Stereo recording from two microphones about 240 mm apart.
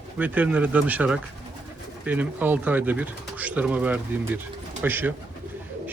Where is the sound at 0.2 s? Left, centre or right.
Centre.